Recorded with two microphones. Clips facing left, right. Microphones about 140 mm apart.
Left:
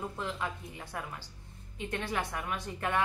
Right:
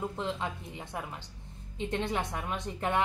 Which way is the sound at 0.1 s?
25° right (ahead or behind).